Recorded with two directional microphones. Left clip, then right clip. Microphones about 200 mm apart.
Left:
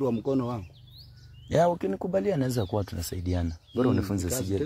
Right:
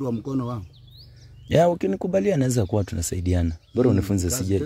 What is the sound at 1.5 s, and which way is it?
Speech, 45° right (ahead or behind).